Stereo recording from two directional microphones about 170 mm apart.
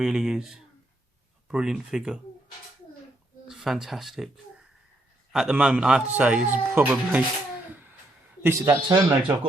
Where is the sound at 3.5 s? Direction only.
Centre (ahead or behind).